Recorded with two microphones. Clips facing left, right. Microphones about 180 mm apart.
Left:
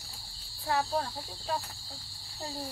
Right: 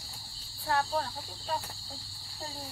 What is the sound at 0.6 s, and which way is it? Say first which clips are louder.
Cricket: even; 5° left (ahead or behind).